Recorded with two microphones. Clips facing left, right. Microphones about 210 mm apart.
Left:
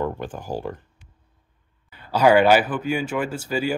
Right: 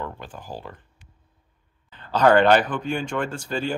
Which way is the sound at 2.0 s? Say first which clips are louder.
Left 1 dB; 10° left (ahead or behind).